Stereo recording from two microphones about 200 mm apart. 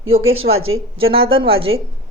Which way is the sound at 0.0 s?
90° right.